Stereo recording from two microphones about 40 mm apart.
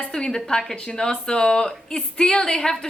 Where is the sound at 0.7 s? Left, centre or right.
Left.